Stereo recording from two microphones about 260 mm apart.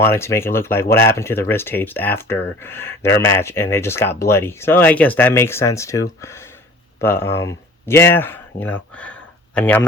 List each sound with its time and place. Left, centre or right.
0.0 s speech: centre